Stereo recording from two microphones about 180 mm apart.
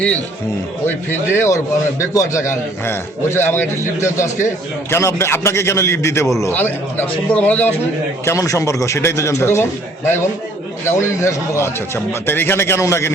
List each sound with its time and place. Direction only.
0.9 s a man's voice: 15° left (ahead or behind)
10.8 s a man's voice: 15° left (ahead or behind)